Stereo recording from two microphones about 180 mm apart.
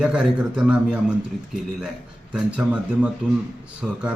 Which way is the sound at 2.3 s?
5° right (ahead or behind).